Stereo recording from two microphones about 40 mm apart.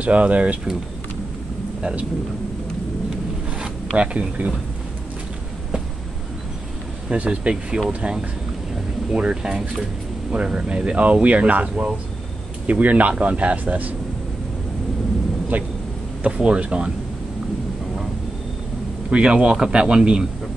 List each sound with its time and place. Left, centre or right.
0.0 s speech: right
3.5 s zipper: right
7.1 s speech: right
15.5 s speech: right
16.4 s speech: right
19.0 s speech: right